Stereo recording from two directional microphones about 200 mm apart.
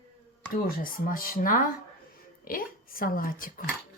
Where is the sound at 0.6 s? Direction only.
45° left (ahead or behind).